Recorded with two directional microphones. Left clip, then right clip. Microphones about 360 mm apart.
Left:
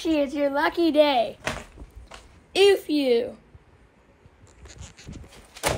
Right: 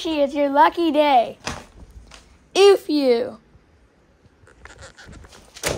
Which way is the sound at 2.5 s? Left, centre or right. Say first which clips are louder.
Right 5 dB; centre.